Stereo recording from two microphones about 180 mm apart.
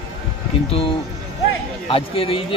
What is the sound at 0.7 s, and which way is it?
Speech, 30° left (ahead or behind).